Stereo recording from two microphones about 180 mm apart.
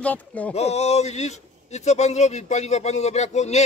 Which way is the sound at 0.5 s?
35° left (ahead or behind).